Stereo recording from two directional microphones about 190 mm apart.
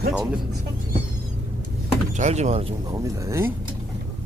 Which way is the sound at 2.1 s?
40° right (ahead or behind).